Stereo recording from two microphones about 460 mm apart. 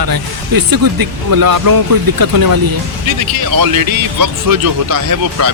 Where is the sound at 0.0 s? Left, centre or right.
Right.